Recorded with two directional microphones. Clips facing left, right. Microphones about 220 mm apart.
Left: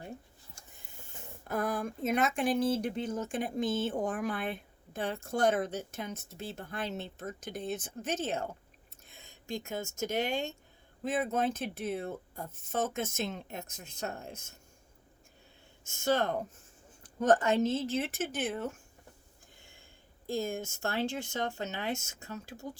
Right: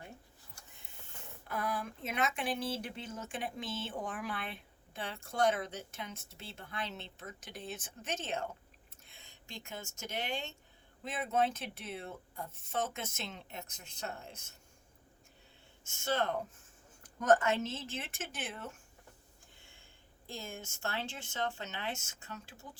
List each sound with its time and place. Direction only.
1.5 s speech: 45° left (ahead or behind)
16.0 s speech: 45° left (ahead or behind)
17.0 s speech: 30° left (ahead or behind)
20.2 s speech: 45° left (ahead or behind)